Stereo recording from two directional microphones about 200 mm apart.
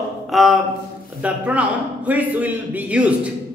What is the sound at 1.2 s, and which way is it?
A man's voice, 5° right (ahead or behind).